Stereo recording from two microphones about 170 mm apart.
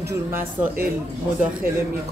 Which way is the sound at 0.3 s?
15° right (ahead or behind).